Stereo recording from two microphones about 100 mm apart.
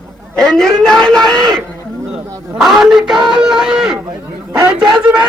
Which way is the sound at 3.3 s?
5° right (ahead or behind).